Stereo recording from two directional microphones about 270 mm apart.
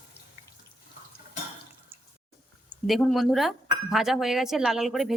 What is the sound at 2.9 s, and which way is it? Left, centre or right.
A woman's voice, centre.